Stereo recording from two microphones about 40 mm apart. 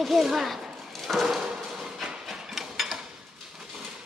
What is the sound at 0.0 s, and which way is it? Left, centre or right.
Speech, centre.